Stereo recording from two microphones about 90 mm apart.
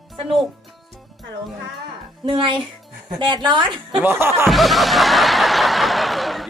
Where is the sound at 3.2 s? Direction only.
60° right (ahead or behind).